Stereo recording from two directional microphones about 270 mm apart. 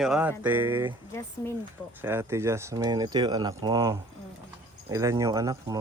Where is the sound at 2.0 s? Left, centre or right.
Centre.